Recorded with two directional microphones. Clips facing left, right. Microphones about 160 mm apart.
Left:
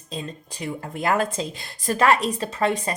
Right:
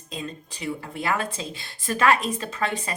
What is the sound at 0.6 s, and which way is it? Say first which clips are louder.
A woman's voice: left 2 dB; 45° left (ahead or behind).